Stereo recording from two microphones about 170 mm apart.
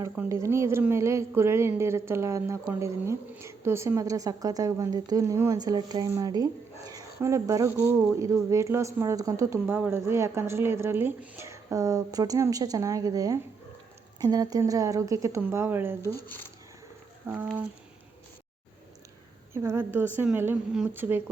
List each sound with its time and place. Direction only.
0.0 s speech: 15° right (ahead or behind)
17.2 s speech: 10° right (ahead or behind)
19.5 s speech: 15° right (ahead or behind)